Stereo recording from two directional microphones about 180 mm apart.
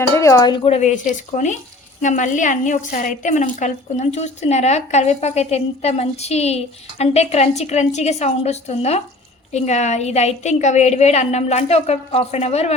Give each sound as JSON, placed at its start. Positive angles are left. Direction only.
{"t": 0.2, "sound": "a woman's voice", "side_deg": 20}